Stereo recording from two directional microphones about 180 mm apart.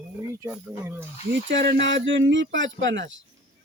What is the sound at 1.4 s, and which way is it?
Speech, 90° right.